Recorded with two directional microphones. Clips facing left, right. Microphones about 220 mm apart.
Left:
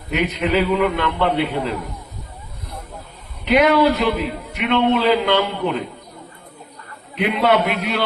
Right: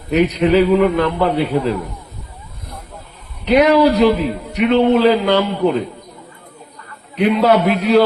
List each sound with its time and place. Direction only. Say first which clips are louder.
0.1 s a man's voice: right 6 dB; 40° right (ahead or behind)
3.5 s a man's voice: right 3 dB; 40° right (ahead or behind)
7.2 s a man's voice: right 4 dB; 40° right (ahead or behind)